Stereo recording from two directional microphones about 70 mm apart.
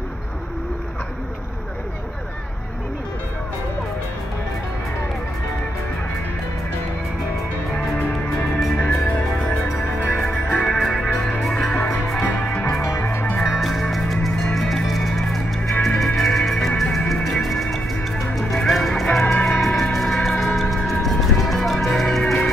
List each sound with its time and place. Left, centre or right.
7.7 s music: centre
10.1 s music: centre
12.3 s music: centre
12.8 s music: left
13.4 s music: centre